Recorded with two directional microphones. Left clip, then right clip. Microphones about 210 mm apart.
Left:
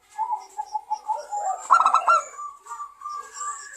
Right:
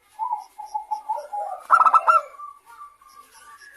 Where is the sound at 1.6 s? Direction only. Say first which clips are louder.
Right 2 dB; 15° right (ahead or behind).